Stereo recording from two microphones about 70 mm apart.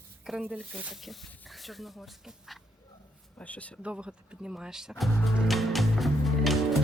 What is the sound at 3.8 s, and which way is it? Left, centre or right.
Music, centre.